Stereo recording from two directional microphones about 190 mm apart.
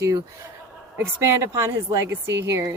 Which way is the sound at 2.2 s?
70° right (ahead or behind).